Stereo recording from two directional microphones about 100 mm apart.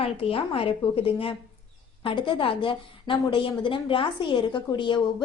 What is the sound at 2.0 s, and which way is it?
A woman's voice, 55° left (ahead or behind).